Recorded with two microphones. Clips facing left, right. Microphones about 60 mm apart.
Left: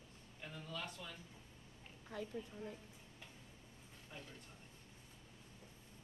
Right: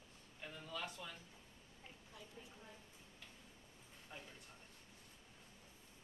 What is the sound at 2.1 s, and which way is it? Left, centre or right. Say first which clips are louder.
Speech: left 14 dB; left.